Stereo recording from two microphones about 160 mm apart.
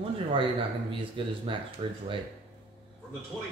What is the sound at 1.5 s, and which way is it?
Speech, 30° right (ahead or behind).